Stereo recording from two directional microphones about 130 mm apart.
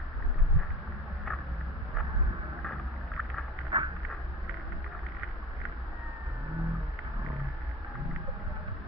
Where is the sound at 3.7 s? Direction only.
45° right (ahead or behind).